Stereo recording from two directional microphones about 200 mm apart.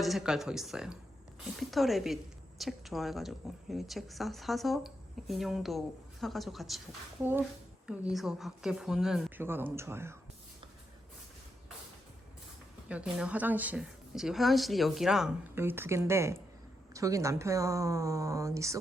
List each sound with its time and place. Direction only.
0.0 s speech: centre (ahead or behind)
12.9 s speech: 5° right (ahead or behind)